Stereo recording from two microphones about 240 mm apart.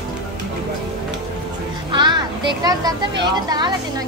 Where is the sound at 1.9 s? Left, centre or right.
Centre.